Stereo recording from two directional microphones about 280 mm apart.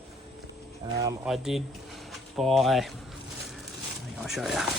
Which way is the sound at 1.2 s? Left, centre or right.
Centre.